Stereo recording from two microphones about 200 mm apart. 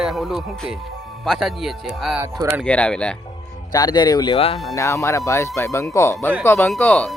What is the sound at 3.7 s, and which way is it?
Speech, 20° left (ahead or behind).